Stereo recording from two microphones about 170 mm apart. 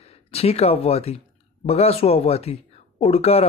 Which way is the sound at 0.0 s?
35° left (ahead or behind).